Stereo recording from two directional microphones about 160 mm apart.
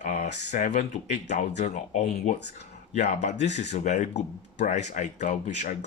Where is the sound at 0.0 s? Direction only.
50° left (ahead or behind).